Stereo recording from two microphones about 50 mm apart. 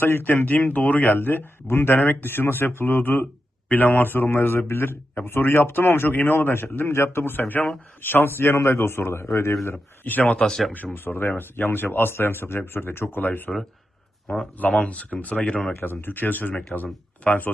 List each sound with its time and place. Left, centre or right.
0.0 s a man's voice: left
9.7 s speech: left
10.4 s speech: centre
10.9 s a man's voice: left
14.8 s speech: left
15.4 s speech: centre
15.8 s speech: left